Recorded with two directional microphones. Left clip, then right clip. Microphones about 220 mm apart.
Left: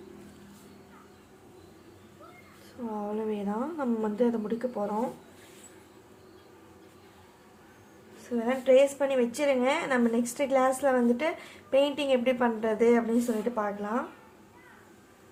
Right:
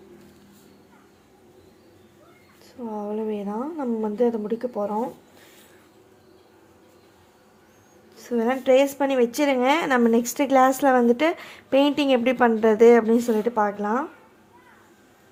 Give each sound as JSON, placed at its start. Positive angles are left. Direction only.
{"t": 2.9, "sound": "a woman's voice", "side_deg": -20}
{"t": 8.2, "sound": "a woman's voice", "side_deg": -40}